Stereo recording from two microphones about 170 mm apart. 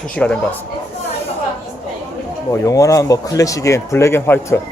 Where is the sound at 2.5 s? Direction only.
20° left (ahead or behind).